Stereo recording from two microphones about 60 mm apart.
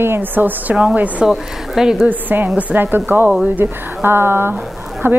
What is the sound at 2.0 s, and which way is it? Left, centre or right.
Speech, right.